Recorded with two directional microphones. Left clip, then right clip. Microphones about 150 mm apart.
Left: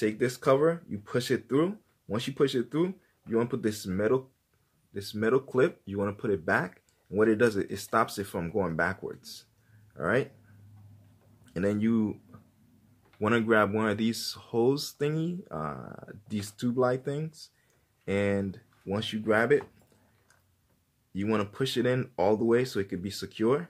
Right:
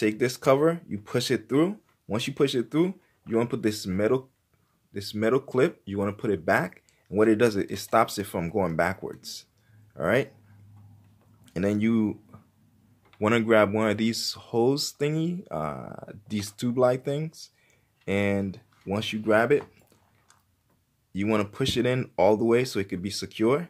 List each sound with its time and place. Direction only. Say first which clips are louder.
0.0 s speech: right 3 dB; 25° right (ahead or behind)
11.4 s speech: right 3 dB; 20° right (ahead or behind)
21.1 s speech: right 3 dB; 20° right (ahead or behind)